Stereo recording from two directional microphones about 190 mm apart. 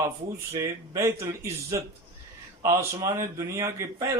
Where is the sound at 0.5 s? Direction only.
15° right (ahead or behind).